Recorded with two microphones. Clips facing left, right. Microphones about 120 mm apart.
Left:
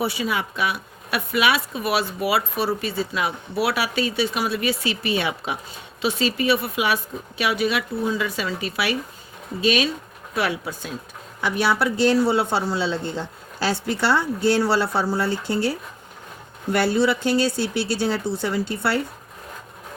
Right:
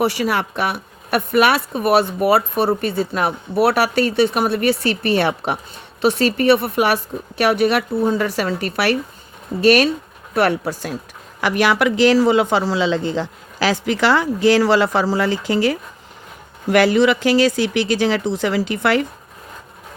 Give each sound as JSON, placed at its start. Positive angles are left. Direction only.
{"t": 0.0, "sound": "speech", "side_deg": -70}
{"t": 11.3, "sound": "speech", "side_deg": -90}